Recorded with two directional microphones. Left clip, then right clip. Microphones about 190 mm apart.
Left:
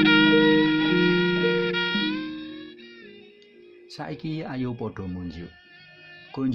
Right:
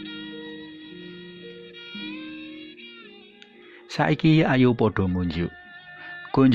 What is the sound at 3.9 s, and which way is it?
Speech, 25° right (ahead or behind).